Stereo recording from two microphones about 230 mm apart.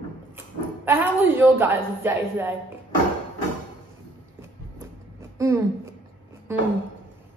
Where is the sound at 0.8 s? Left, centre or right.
Centre.